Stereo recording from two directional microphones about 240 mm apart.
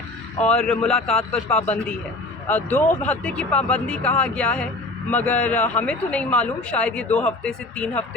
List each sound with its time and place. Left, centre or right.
0.4 s speech: centre